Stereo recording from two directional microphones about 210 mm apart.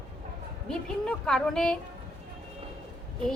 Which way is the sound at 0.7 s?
5° left (ahead or behind).